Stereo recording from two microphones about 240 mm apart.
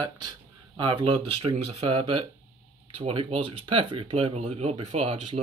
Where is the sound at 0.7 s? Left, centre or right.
Right.